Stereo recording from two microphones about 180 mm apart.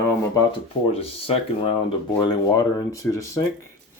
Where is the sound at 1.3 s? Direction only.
30° left (ahead or behind).